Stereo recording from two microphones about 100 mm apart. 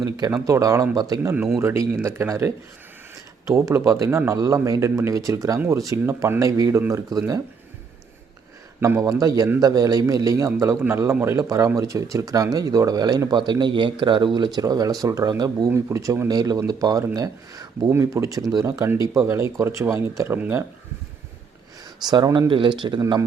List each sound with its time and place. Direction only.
0.0 s speech: 45° right (ahead or behind)
0.4 s speech: 30° right (ahead or behind)
1.2 s speech: 20° right (ahead or behind)
8.8 s speech: 30° right (ahead or behind)
15.7 s speech: 30° right (ahead or behind)
22.1 s speech: 45° right (ahead or behind)